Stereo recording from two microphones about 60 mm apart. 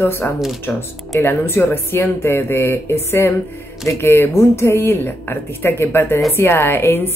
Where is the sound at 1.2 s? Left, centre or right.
Left.